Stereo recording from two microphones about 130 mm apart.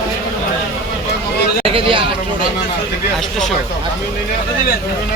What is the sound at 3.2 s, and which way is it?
Speech, 5° left (ahead or behind).